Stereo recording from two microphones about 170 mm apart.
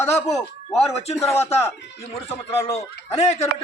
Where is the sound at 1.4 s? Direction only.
35° left (ahead or behind).